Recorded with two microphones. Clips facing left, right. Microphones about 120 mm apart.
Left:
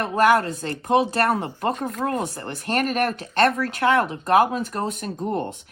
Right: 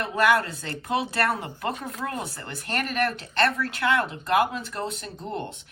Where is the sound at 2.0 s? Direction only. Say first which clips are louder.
Left 7 dB; 45° left (ahead or behind).